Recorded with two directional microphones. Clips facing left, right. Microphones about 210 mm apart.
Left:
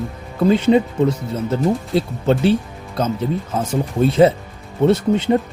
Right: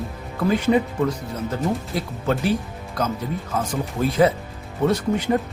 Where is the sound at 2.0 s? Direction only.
30° left (ahead or behind).